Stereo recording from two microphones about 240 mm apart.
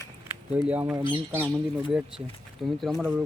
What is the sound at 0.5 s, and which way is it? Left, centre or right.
Speech, centre.